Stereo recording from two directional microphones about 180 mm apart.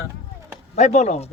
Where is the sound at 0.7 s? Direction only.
40° left (ahead or behind).